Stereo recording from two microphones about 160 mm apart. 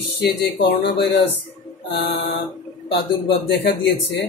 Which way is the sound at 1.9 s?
90° left.